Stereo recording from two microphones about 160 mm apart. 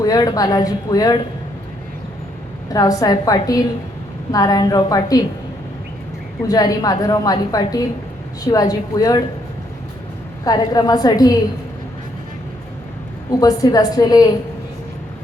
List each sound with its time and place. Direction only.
0.0 s a woman's voice: 25° left (ahead or behind)
2.7 s a woman's voice: 25° left (ahead or behind)
6.5 s a woman's voice: 25° left (ahead or behind)
10.4 s a woman's voice: 25° left (ahead or behind)
13.4 s a woman's voice: 25° left (ahead or behind)